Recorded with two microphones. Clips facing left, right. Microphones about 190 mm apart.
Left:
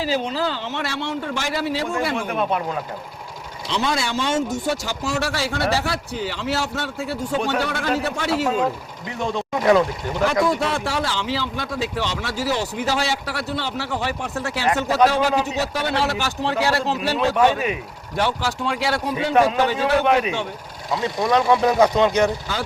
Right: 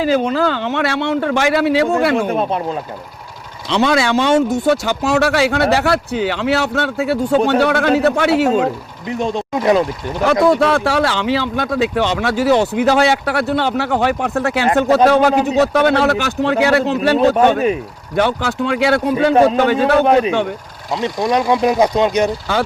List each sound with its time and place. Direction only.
0.0 s speech: 55° right (ahead or behind)
2.3 s speech: 35° right (ahead or behind)
3.7 s speech: 70° right (ahead or behind)
9.0 s speech: 20° right (ahead or behind)
10.4 s speech: 65° right (ahead or behind)
19.3 s speech: 30° right (ahead or behind)
19.5 s speech: 60° right (ahead or behind)
20.1 s speech: 35° right (ahead or behind)
20.9 s speech: 20° right (ahead or behind)